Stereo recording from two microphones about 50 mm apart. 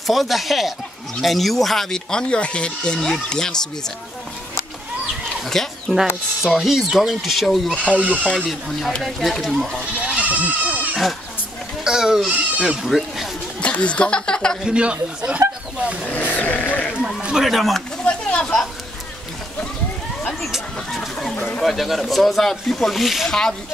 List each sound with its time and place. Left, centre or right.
0.0 s speech: centre
5.4 s speech: centre
7.9 s speech: right
8.4 s speech: centre
10.1 s goat: right
11.8 s speech: centre
13.6 s speech: left
14.6 s speech: right
16.1 s sheep: left
17.4 s speech: centre
18.0 s speech: centre
20.5 s speech: centre
23.2 s speech: centre